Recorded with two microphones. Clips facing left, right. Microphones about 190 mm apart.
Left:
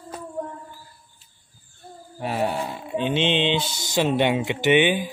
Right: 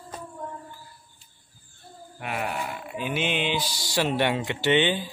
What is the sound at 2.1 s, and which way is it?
Mantra, 30° left (ahead or behind).